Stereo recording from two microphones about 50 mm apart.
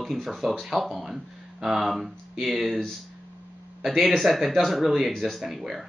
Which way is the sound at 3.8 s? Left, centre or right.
Centre.